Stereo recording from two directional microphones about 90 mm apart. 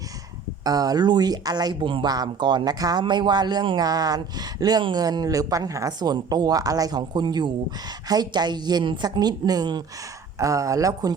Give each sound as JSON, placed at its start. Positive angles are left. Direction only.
{"t": 0.6, "sound": "speech", "side_deg": -45}
{"t": 3.0, "sound": "speech", "side_deg": -55}
{"t": 9.0, "sound": "speech", "side_deg": -45}
{"t": 10.3, "sound": "speech", "side_deg": -35}